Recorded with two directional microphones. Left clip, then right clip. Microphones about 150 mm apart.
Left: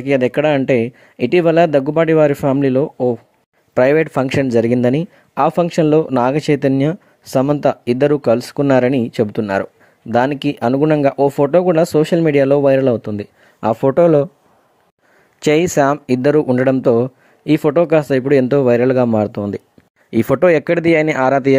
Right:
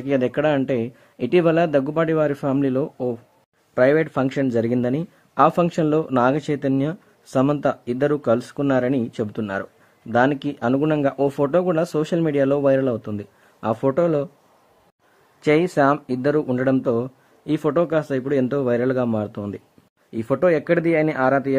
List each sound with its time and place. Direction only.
0.0 s speech: 40° left (ahead or behind)
3.7 s speech: 45° left (ahead or behind)
15.4 s speech: 40° left (ahead or behind)
20.1 s speech: 55° left (ahead or behind)